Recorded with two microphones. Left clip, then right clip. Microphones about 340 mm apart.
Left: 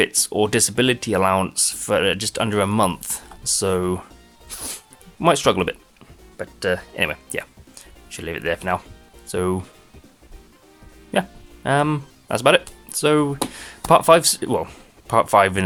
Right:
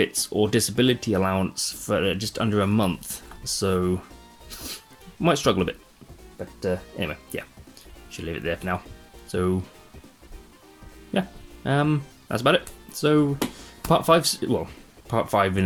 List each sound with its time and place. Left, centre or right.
0.0 s speech: centre
0.3 s speech: left
0.5 s speech: left
4.4 s music: centre
5.2 s speech: left
11.1 s speech: left